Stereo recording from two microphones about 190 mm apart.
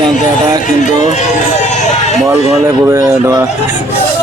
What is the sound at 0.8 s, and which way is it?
Speech, 40° left (ahead or behind).